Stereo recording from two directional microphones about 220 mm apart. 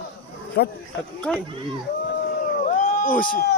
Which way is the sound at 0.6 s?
45° left (ahead or behind).